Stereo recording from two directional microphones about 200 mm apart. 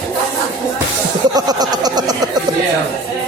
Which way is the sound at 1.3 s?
20° right (ahead or behind).